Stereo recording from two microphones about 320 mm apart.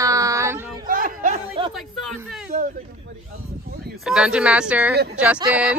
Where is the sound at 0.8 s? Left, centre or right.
Right.